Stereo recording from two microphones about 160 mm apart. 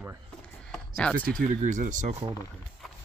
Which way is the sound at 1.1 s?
60° right (ahead or behind).